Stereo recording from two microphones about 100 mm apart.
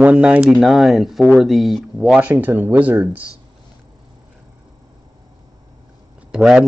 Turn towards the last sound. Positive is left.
turn(degrees=-5)  # may be behind; listen again after turning